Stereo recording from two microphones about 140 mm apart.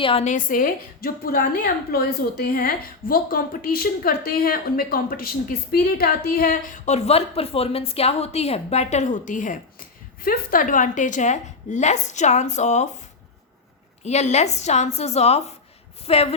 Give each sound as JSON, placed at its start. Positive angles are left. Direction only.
{"t": 0.0, "sound": "a woman's voice", "side_deg": 40}
{"t": 0.3, "sound": "a woman's voice", "side_deg": 70}
{"t": 14.0, "sound": "a woman's voice", "side_deg": 55}